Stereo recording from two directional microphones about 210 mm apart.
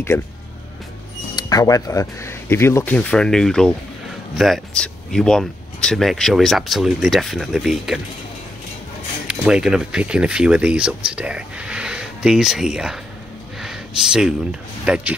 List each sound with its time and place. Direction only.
0.1 s speech: 10° left (ahead or behind)
1.3 s speech: 20° left (ahead or behind); by 8.0 s centre (ahead or behind)
9.3 s speech: 5° right (ahead or behind)
13.6 s a sound: centre (ahead or behind)
14.9 s speech: 5° right (ahead or behind)